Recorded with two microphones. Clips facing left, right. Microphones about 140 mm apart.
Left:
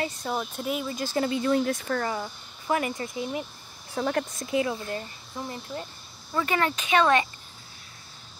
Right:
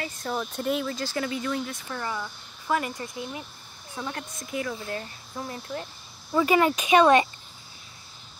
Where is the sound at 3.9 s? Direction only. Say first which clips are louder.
Left 8 dB; 40° left (ahead or behind).